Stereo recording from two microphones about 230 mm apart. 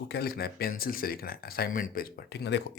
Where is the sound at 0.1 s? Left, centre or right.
Left.